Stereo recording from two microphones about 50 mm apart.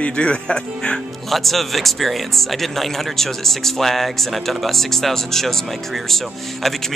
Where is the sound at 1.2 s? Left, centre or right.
Centre.